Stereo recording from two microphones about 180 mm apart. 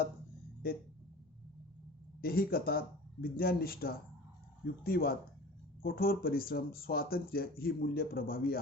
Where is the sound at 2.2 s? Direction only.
55° left (ahead or behind).